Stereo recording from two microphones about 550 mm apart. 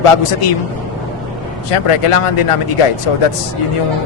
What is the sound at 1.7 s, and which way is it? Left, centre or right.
Speech, left.